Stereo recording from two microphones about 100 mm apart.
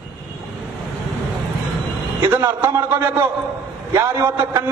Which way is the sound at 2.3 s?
20° right (ahead or behind).